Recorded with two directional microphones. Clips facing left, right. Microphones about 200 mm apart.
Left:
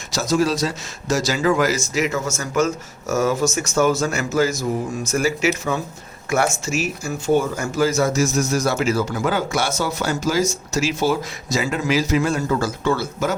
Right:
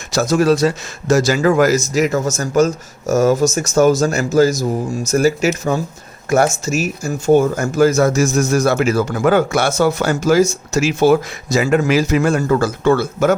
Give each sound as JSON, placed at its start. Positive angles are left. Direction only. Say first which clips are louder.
{"t": 0.1, "sound": "speech", "louder": "right 5 dB", "side_deg": -55}